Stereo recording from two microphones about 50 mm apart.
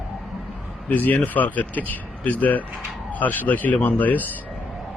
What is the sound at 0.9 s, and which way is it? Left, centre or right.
Speech, left.